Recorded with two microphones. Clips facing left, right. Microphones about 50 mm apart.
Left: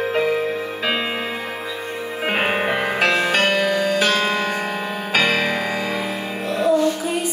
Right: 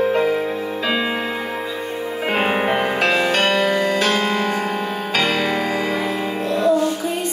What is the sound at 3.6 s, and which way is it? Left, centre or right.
Music, centre.